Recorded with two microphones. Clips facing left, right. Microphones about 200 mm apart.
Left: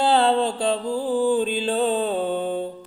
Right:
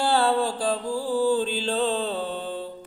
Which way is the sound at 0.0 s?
20° left (ahead or behind).